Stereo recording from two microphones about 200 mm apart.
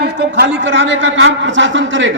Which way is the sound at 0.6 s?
65° right (ahead or behind).